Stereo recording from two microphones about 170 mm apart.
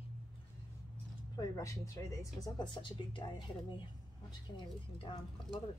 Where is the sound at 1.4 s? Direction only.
20° left (ahead or behind).